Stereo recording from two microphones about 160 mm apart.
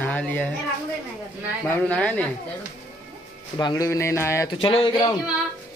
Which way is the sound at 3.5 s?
20° left (ahead or behind).